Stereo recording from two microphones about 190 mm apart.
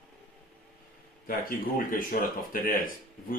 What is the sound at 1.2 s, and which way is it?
Speech, 45° left (ahead or behind).